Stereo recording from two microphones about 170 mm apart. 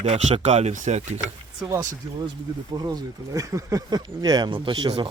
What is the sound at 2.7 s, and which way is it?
Speech, 25° right (ahead or behind).